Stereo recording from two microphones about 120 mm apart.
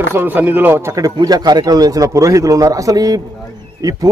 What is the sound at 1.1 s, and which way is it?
A man's voice, 35° right (ahead or behind).